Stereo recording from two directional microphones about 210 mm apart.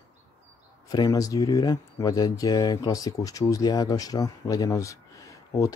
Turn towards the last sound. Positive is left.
turn(degrees=15)  # may be behind; listen again after turning